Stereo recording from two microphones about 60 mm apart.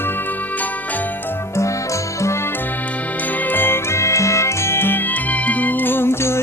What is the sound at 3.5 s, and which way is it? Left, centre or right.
Music, left.